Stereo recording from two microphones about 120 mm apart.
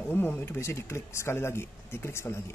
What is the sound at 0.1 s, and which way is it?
Speech, 20° left (ahead or behind).